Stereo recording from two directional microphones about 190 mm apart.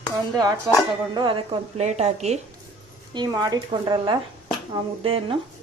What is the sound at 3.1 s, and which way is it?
Speech, 20° right (ahead or behind).